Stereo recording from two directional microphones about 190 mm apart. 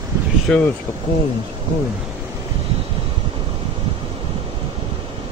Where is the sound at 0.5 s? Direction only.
5° left (ahead or behind).